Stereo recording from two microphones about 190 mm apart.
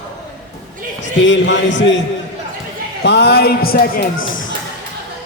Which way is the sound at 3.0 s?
60° left (ahead or behind).